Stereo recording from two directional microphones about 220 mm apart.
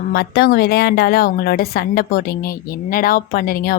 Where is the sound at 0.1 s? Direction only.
50° left (ahead or behind).